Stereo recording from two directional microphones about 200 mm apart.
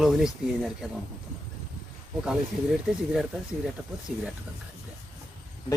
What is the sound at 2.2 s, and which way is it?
Speech, 5° right (ahead or behind).